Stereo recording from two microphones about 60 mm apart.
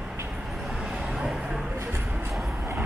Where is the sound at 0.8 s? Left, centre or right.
Centre.